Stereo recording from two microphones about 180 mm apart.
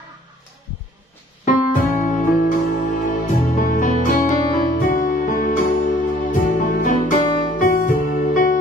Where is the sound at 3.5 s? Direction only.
45° left (ahead or behind).